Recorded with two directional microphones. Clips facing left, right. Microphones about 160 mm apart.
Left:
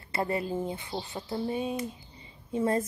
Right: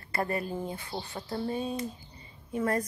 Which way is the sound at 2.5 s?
25° left (ahead or behind).